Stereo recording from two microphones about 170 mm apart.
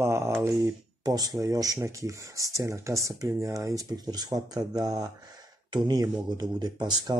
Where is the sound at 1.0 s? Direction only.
20° right (ahead or behind).